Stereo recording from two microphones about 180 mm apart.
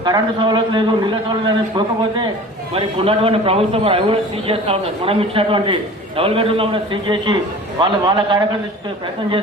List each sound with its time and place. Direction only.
0.0 s a man's voice: 25° right (ahead or behind)